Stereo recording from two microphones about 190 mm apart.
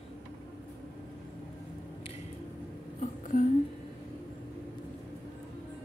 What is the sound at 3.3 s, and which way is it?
Speech, 40° left (ahead or behind).